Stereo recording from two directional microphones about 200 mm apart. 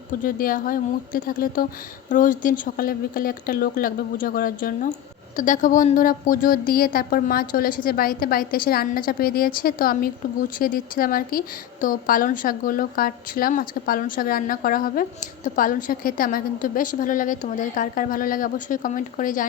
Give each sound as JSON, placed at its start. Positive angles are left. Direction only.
{"t": 0.2, "sound": "a woman's voice", "side_deg": 45}